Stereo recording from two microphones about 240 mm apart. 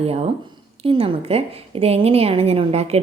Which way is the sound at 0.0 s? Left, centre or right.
Right.